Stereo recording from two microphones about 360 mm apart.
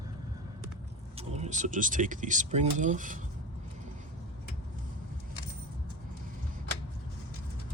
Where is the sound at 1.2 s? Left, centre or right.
Centre.